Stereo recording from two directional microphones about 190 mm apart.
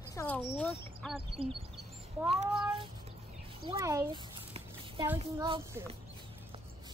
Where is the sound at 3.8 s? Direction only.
15° right (ahead or behind).